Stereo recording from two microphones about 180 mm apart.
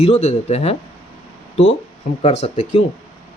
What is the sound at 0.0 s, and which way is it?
Speech, 35° left (ahead or behind).